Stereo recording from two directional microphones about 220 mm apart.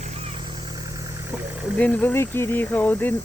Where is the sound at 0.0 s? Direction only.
25° right (ahead or behind).